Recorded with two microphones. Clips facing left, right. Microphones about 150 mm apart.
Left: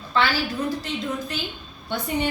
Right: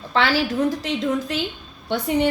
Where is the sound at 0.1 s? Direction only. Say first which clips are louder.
Right 3 dB; 90° right.